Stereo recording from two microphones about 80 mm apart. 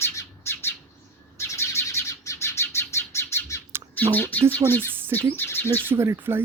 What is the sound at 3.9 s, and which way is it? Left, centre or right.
Speech, left.